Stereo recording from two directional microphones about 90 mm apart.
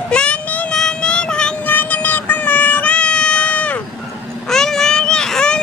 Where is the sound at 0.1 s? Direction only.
10° left (ahead or behind).